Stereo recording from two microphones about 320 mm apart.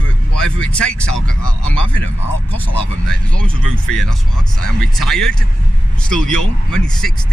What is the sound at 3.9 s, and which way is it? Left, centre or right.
Speech, centre.